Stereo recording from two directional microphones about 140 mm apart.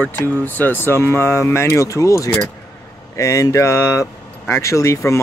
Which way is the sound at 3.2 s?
20° left (ahead or behind).